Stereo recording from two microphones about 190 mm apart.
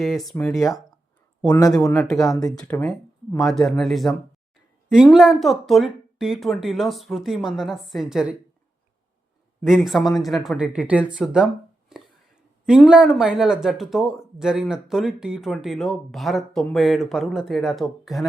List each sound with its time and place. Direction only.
0.0 s speech: centre (ahead or behind); by 2.5 s 20° left (ahead or behind)
2.5 s speech: 10° left (ahead or behind)
9.6 s speech: centre (ahead or behind)
11.9 s a sound: centre (ahead or behind)
12.6 s speech: 5° right (ahead or behind)